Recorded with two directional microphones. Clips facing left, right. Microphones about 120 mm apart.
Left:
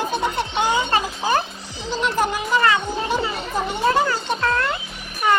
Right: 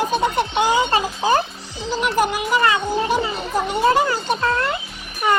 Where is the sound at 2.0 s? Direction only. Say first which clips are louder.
Right 2 dB; 10° right (ahead or behind).